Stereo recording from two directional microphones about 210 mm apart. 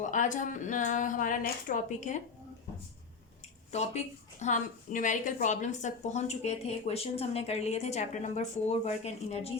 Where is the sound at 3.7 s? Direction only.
30° left (ahead or behind).